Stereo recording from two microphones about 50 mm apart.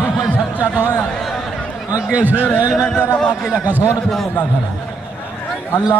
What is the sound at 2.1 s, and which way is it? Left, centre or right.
Speech, right.